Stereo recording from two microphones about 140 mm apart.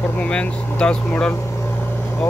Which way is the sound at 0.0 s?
10° left (ahead or behind).